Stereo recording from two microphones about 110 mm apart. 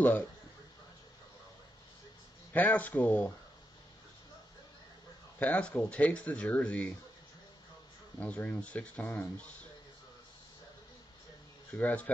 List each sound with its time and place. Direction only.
0.0 s speech: 15° left (ahead or behind)
2.5 s speech: 15° left (ahead or behind)
5.4 s speech: 10° left (ahead or behind)
8.2 s speech: 15° left (ahead or behind)
11.8 s speech: 10° left (ahead or behind)